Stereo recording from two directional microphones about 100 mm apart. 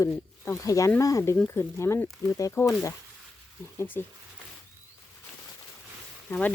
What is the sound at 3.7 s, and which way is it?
Speech, 20° left (ahead or behind).